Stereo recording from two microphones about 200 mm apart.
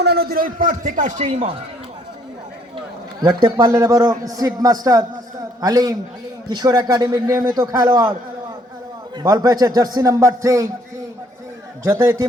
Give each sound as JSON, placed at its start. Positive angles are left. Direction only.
{"t": 0.0, "sound": "a man's voice", "side_deg": -55}
{"t": 3.2, "sound": "a man's voice", "side_deg": -20}
{"t": 9.1, "sound": "a man's voice", "side_deg": -20}
{"t": 11.9, "sound": "a man's voice", "side_deg": -15}